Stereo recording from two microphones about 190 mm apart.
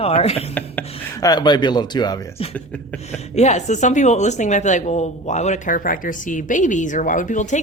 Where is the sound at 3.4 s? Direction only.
40° left (ahead or behind).